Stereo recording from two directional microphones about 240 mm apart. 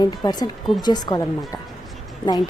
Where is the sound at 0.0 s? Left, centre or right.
Centre.